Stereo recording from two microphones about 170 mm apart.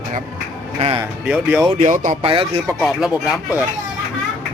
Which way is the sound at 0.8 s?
35° right (ahead or behind).